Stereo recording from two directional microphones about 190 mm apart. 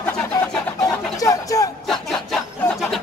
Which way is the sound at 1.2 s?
15° left (ahead or behind).